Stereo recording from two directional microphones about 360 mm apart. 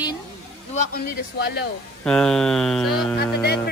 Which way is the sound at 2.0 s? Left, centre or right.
Centre.